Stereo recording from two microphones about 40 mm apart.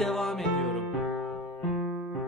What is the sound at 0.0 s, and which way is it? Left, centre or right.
Music, centre.